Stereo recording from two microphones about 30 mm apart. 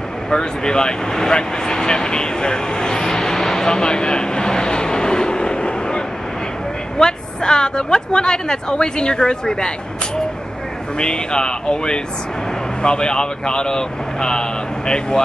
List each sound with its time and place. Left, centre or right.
0.3 s speech: left
11.0 s speech: left